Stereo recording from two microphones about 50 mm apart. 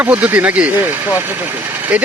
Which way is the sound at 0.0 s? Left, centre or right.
Right.